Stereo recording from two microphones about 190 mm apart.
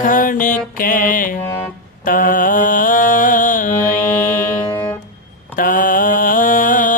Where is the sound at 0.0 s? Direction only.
45° left (ahead or behind).